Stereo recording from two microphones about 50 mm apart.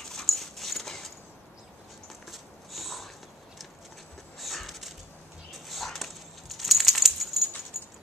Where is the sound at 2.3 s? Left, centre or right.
Centre.